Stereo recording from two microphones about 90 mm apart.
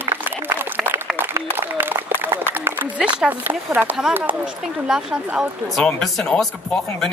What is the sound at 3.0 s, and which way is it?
Speech, 15° right (ahead or behind).